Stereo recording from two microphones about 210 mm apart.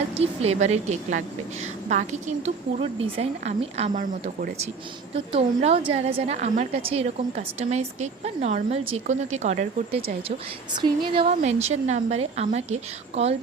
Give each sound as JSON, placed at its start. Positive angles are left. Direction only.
{"t": 0.1, "sound": "a woman's voice", "side_deg": -30}